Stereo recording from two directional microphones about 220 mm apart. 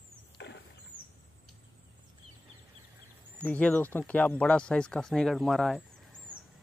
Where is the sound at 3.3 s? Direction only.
5° left (ahead or behind).